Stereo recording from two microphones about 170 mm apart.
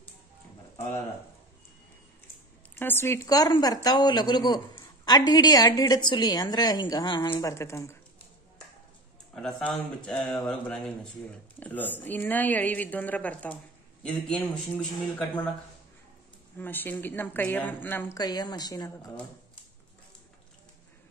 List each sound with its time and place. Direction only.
2.7 s a woman's voice: 10° left (ahead or behind)
9.6 s a man's voice: 5° left (ahead or behind)
16.5 s speech: 10° left (ahead or behind)
18.1 s a woman's voice: 25° left (ahead or behind)